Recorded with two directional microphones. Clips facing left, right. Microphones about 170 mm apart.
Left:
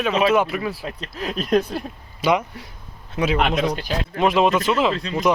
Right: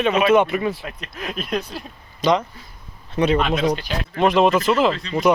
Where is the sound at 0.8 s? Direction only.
30° left (ahead or behind); by 1.8 s 55° left (ahead or behind).